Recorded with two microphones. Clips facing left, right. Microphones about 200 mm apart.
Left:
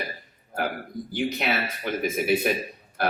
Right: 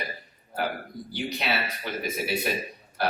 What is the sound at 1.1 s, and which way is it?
Speech, 50° left (ahead or behind).